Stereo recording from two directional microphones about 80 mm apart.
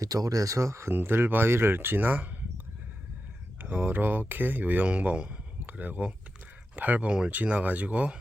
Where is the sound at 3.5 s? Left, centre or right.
Right.